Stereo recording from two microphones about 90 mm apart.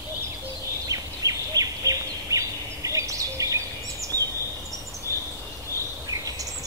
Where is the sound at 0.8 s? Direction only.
40° right (ahead or behind).